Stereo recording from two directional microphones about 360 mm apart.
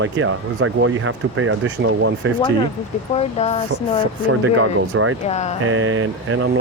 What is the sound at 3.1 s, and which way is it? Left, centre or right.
Speech, centre.